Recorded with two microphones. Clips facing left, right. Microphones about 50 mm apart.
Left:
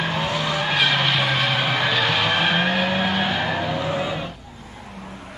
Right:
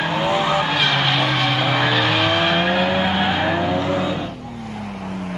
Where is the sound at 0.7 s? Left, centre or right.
Centre.